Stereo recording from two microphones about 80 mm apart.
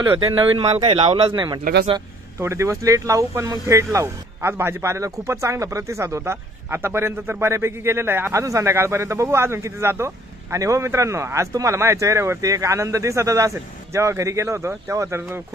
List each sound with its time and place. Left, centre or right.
0.4 s speech: right
1.3 s speech: right
2.4 s speech: right